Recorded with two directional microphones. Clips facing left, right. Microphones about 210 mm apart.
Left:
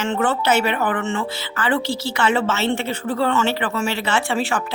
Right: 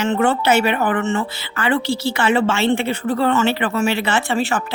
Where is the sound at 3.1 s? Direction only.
40° right (ahead or behind).